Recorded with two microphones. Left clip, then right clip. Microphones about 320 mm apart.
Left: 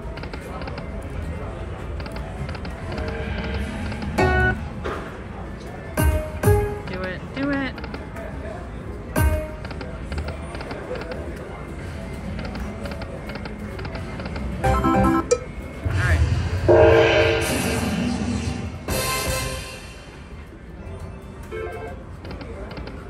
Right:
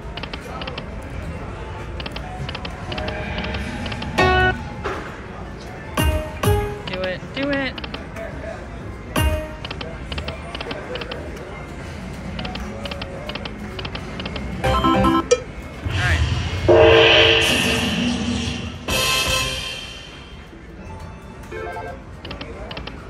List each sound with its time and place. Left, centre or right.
0.6 s music: centre
3.1 s music: right
3.5 s music: centre
5.9 s music: centre
9.1 s music: centre
12.4 s music: centre
15.9 s gong: centre